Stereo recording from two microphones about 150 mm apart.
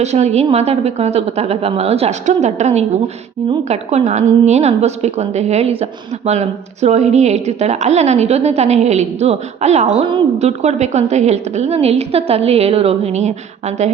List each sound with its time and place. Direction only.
0.0 s a woman's voice: 50° right (ahead or behind)